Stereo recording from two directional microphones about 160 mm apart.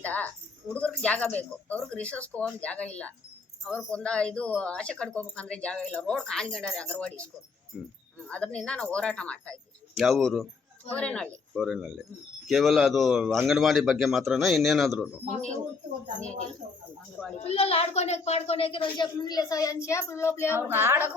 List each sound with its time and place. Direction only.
0.0 s speech: 10° left (ahead or behind)
7.7 s a man's voice: 5° right (ahead or behind)
17.4 s a child's voice: 40° left (ahead or behind); by 20.6 s 15° left (ahead or behind)
20.6 s a woman's voice: 15° right (ahead or behind)